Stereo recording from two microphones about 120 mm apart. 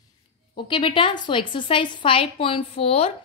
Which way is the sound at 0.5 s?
45° left (ahead or behind).